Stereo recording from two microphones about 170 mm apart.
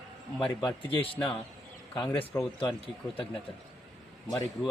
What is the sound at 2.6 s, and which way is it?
Speech, 30° left (ahead or behind).